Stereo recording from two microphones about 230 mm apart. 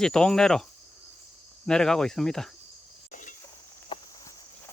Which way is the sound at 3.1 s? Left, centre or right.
Left.